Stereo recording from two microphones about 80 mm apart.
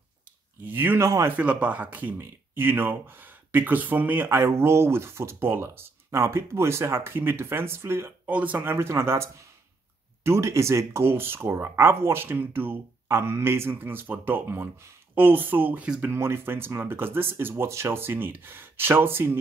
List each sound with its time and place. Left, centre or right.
0.7 s speech: right
1.0 s speech: right
1.3 s speech: centre
8.3 s speech: centre
8.7 s speech: right